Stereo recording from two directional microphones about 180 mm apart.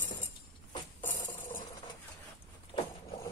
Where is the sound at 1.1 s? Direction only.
50° left (ahead or behind).